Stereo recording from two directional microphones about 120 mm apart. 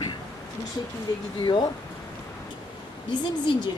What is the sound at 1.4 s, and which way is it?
Speech, 40° left (ahead or behind).